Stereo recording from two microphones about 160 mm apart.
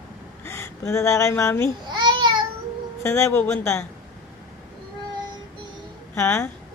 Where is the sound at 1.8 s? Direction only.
30° right (ahead or behind).